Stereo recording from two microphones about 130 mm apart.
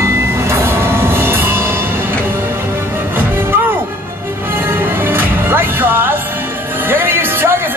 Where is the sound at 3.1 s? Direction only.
15° right (ahead or behind).